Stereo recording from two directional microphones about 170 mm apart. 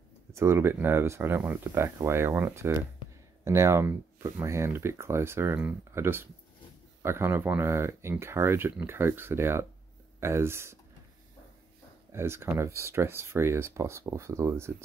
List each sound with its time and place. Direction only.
0.3 s speech: 15° right (ahead or behind)
12.1 s speech: 15° right (ahead or behind)